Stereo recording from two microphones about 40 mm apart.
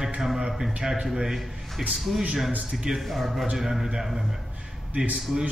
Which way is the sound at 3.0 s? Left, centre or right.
Centre.